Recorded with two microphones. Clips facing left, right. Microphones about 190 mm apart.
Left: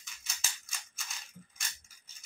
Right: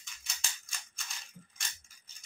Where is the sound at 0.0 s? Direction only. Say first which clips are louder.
Even; 5° left (ahead or behind).